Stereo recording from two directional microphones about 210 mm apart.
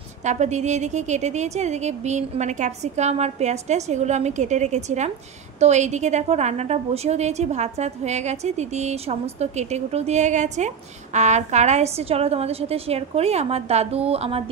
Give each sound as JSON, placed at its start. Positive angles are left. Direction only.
{"t": 0.2, "sound": "a woman's voice", "side_deg": -35}